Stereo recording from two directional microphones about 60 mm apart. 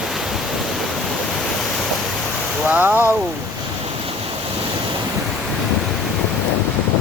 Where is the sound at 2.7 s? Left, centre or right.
Right.